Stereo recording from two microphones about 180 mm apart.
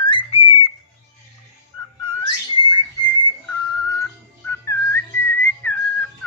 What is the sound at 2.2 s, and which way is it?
Bird, 30° left (ahead or behind).